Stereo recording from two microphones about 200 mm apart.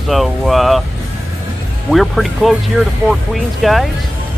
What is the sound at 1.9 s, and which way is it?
Speech, centre (ahead or behind).